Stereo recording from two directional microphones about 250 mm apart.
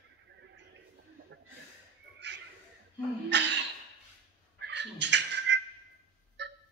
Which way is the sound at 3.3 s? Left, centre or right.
Right.